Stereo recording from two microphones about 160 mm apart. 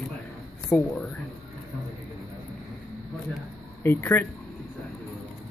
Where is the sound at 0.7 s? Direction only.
5° left (ahead or behind).